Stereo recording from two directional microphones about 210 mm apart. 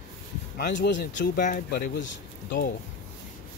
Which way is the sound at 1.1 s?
40° left (ahead or behind).